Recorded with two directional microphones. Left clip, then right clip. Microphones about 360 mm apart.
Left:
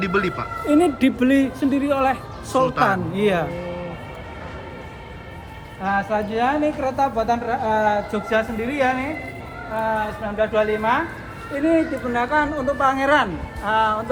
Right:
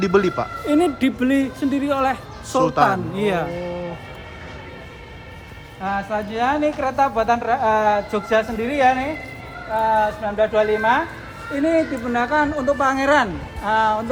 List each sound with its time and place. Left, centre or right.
0.0 s speech: centre
5.8 s speech: centre; by 11.0 s right
12.1 s speech: right